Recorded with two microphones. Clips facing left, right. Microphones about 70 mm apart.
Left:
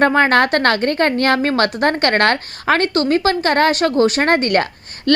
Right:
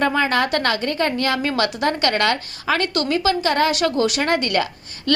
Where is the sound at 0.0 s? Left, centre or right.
Left.